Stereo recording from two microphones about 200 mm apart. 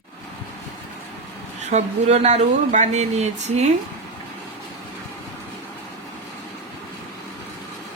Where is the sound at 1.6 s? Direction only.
35° right (ahead or behind).